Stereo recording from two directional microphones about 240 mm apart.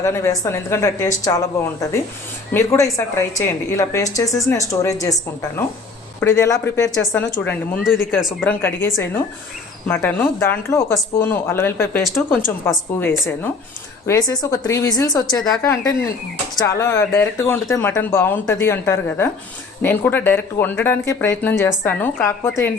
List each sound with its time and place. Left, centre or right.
0.0 s a woman's voice: centre
2.5 s a woman's voice: centre
14.1 s a woman's voice: centre
15.4 s a woman's voice: centre